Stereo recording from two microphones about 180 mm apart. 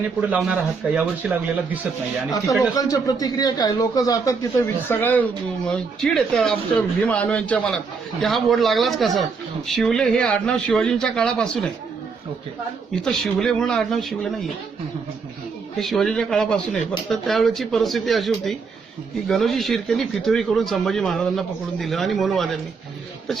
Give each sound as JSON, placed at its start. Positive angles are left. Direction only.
{"t": 0.2, "sound": "speech", "side_deg": -5}
{"t": 2.7, "sound": "a man's voice", "side_deg": 20}
{"t": 13.1, "sound": "speech", "side_deg": 0}
{"t": 15.8, "sound": "speech", "side_deg": 0}